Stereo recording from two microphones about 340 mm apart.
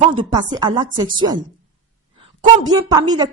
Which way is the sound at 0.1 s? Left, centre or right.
Centre.